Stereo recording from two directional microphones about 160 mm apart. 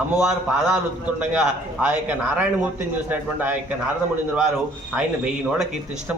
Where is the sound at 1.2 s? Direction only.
10° right (ahead or behind).